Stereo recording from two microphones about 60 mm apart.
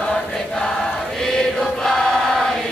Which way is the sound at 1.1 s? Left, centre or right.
Centre.